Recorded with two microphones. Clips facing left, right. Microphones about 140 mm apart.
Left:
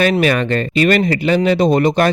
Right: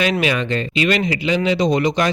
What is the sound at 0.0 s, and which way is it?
A man's voice, 50° left (ahead or behind).